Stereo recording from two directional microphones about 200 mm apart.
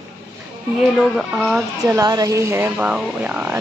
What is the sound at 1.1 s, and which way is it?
Speech, centre (ahead or behind).